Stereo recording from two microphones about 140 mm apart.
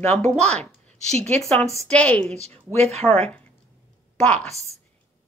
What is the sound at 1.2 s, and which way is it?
A woman's voice, 15° left (ahead or behind).